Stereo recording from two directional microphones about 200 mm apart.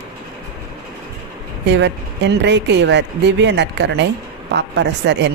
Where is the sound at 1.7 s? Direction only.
60° right (ahead or behind).